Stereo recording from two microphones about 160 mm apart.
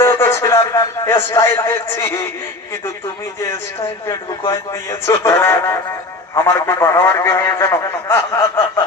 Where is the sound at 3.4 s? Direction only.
15° left (ahead or behind).